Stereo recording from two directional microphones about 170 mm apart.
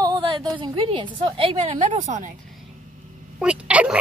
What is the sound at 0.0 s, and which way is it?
A woman's voice, 30° right (ahead or behind).